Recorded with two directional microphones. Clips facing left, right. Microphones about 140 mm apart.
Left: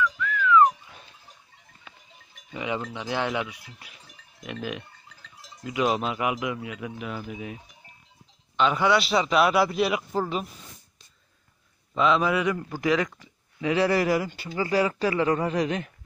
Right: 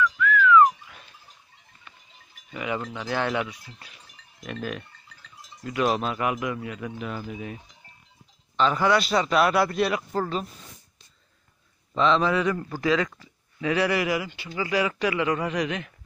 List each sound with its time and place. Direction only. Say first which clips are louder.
0.0 s whistling: right 4 dB; 30° left (ahead or behind)
2.5 s cowbell: even; 20° left (ahead or behind)
2.9 s speech: right 1 dB; 20° left (ahead or behind)
11.9 s a man's voice: right 1 dB; 10° left (ahead or behind); by 15.9 s 35° left (ahead or behind)